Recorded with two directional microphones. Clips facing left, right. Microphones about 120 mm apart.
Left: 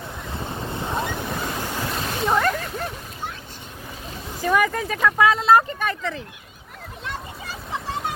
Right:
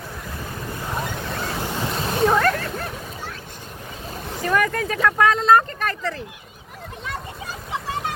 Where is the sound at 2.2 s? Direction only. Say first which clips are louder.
Right 3 dB; 5° left (ahead or behind).